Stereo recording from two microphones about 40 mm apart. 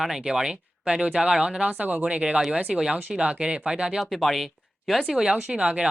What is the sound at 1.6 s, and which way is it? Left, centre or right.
Speech, right.